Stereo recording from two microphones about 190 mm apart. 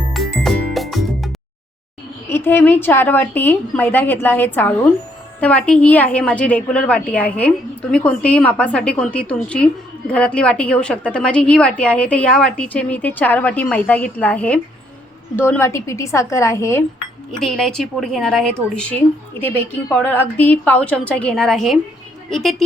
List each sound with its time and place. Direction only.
0.1 s music: centre (ahead or behind)
2.3 s a woman's voice: 10° left (ahead or behind)
17.4 s a woman's voice: 5° left (ahead or behind)